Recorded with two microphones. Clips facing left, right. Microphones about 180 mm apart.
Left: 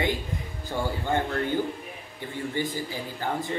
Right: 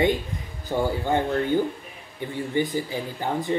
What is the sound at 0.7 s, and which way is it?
Speech, 15° right (ahead or behind).